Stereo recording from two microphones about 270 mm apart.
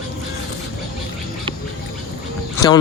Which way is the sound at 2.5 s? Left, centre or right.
Centre.